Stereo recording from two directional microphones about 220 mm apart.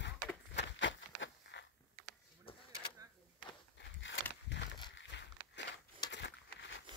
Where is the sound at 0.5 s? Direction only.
55° left (ahead or behind).